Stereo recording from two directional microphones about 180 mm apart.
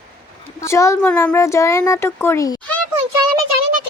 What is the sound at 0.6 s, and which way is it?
Speech, 15° left (ahead or behind).